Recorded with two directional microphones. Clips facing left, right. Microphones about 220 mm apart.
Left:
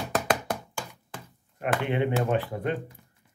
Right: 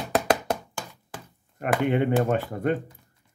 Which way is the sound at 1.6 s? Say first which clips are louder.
Right 3 dB; 50° right (ahead or behind).